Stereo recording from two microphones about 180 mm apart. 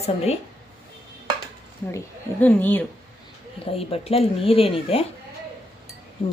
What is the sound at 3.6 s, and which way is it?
Speech, 30° left (ahead or behind).